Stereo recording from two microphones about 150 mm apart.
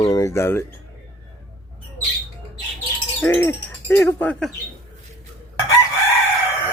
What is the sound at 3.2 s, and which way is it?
Speech, 15° left (ahead or behind).